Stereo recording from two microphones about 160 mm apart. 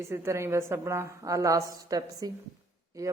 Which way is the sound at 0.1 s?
15° right (ahead or behind).